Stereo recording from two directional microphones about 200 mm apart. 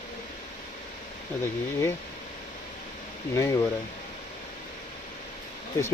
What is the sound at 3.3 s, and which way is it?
Speech, 15° left (ahead or behind).